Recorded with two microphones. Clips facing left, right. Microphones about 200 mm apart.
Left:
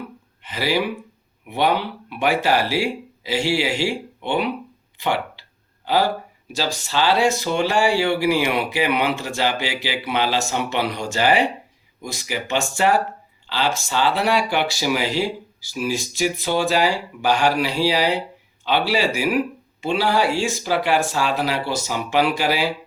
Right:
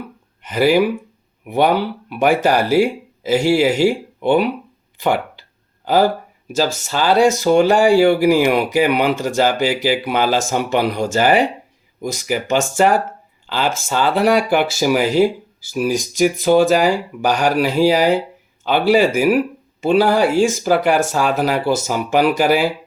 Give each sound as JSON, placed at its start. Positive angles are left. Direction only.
{"t": 0.4, "sound": "speech", "side_deg": -50}
{"t": 5.0, "sound": "a sound", "side_deg": -45}
{"t": 6.6, "sound": "speech", "side_deg": -45}